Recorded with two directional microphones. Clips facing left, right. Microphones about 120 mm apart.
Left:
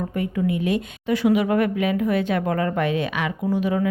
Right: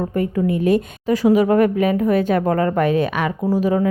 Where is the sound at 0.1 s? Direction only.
40° right (ahead or behind).